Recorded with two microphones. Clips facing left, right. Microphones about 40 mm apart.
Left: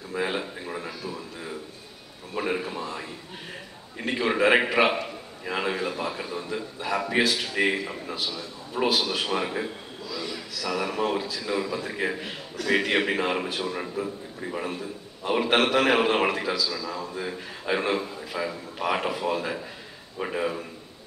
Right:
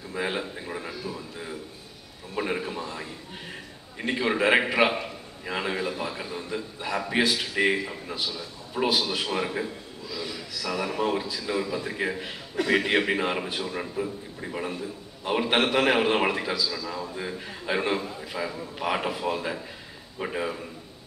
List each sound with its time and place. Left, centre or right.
0.1 s a sound: centre
4.0 s a man's voice: centre
10.1 s a man's voice: centre
12.6 s a sound: right
12.9 s a man's voice: centre
15.5 s a man's voice: centre